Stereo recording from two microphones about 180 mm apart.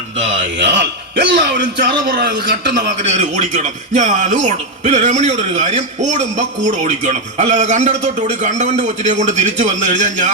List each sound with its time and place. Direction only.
0.3 s a man's voice: 80° right
3.0 s speech: 40° right (ahead or behind)